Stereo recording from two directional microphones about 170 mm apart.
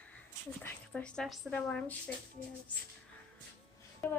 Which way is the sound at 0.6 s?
5° left (ahead or behind).